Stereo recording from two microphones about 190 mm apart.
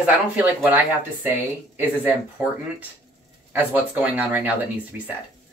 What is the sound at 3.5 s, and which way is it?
Speech, 10° right (ahead or behind).